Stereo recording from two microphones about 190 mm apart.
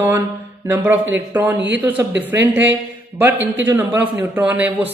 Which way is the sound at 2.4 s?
70° right (ahead or behind).